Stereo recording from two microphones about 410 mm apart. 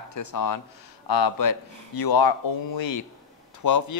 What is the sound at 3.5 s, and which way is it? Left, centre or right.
Speech, left.